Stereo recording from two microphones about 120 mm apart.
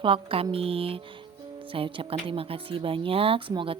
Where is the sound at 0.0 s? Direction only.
50° right (ahead or behind).